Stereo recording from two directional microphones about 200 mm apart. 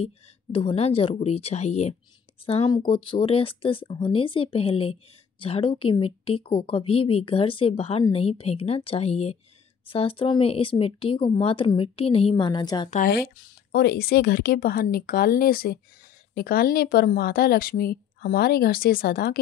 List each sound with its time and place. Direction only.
0.0 s speech: 25° left (ahead or behind)
12.9 s a woman's voice: 45° left (ahead or behind)